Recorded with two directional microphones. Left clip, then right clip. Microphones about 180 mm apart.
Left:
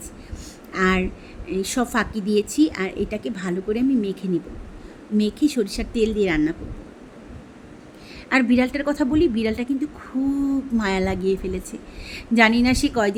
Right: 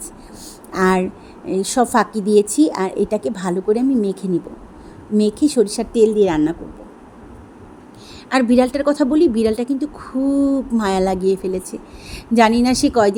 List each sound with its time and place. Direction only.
0.7 s a woman's voice: 20° right (ahead or behind)
8.3 s a woman's voice: 15° right (ahead or behind)